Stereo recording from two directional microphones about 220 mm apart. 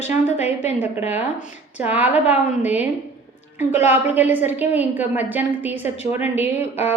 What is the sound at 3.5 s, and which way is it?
Speech, 30° left (ahead or behind).